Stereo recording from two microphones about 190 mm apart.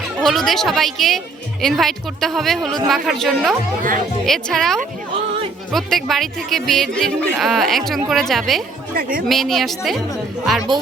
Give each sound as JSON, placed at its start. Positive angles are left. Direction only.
{"t": 0.2, "sound": "speech", "side_deg": 0}
{"t": 9.0, "sound": "speech", "side_deg": -50}
{"t": 9.2, "sound": "speech", "side_deg": 0}